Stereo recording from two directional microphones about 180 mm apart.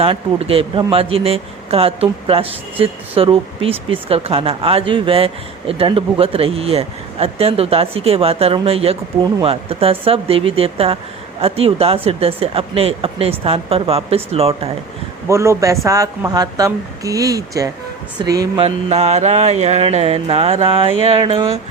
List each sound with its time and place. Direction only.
0.0 s speech: 30° right (ahead or behind)
15.3 s speech: 15° right (ahead or behind)
18.6 s speech: 35° right (ahead or behind)